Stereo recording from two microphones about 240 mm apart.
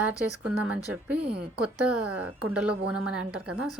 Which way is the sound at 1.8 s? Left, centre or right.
Right.